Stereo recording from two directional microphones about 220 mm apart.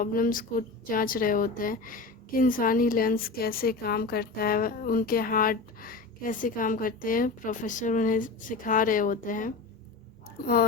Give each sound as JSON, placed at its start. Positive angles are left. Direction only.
{"t": 0.0, "sound": "a woman's voice", "side_deg": 40}